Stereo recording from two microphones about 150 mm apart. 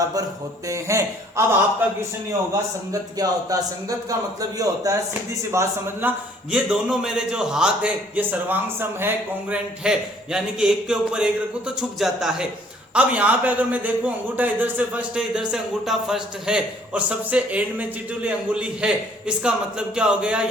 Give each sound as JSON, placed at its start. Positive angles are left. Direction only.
{"t": 0.0, "sound": "speech", "side_deg": -25}
{"t": 2.9, "sound": "speech", "side_deg": -25}
{"t": 20.0, "sound": "speech", "side_deg": -5}